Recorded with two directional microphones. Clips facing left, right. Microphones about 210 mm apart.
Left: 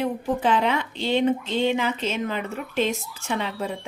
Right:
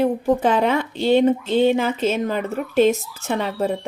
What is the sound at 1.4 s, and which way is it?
Speech, 10° right (ahead or behind).